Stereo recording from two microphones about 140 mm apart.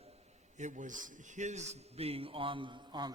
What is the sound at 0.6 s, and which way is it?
A man's voice, 60° right (ahead or behind).